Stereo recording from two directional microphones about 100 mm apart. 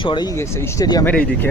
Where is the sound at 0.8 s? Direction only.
40° left (ahead or behind).